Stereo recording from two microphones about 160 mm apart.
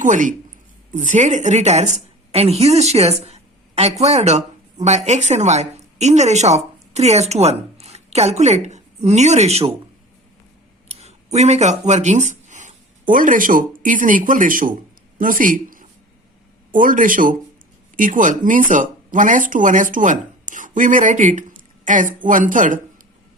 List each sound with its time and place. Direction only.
0.0 s a woman's voice: 55° right (ahead or behind)
10.8 s speech: 45° right (ahead or behind)